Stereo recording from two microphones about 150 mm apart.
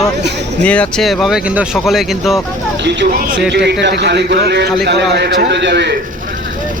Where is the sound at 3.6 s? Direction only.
90° right.